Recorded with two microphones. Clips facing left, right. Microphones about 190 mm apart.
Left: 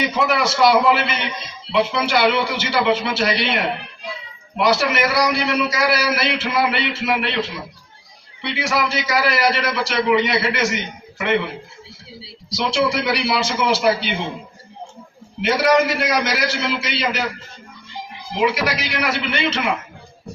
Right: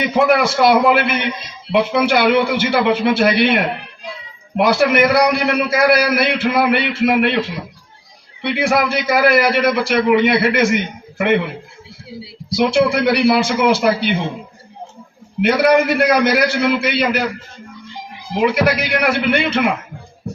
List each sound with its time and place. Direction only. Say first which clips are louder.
0.0 s a man's voice: right 5 dB; 55° right (ahead or behind)
15.4 s a man's voice: right 3 dB; 55° right (ahead or behind)
18.3 s a man's voice: right 5 dB; 55° right (ahead or behind)